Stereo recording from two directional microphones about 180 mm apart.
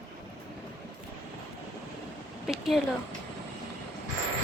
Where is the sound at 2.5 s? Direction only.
Centre (ahead or behind).